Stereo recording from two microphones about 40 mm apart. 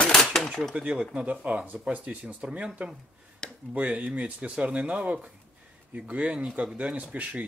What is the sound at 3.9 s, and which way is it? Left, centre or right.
Speech, right.